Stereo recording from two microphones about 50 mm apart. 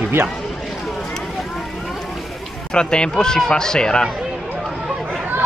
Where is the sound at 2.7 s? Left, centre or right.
Centre.